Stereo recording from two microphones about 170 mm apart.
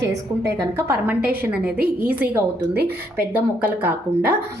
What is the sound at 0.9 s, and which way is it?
A woman's voice, 10° right (ahead or behind).